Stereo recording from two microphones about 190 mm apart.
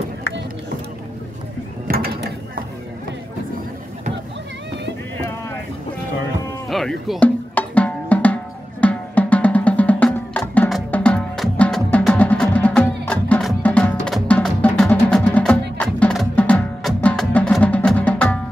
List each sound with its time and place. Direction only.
1.9 s mechanisms: 50° right (ahead or behind)
6.7 s drum: centre (ahead or behind)
8.8 s music: 5° left (ahead or behind)